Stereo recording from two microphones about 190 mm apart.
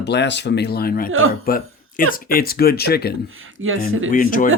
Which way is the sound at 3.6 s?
90° right.